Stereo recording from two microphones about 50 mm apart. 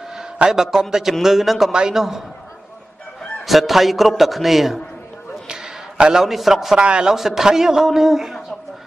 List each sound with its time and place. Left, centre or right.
0.1 s a man's voice: centre
1.7 s a man's voice: centre
3.4 s a man's voice: centre
5.5 s a sound: centre
6.8 s a man's voice: centre
7.2 s a man's voice: centre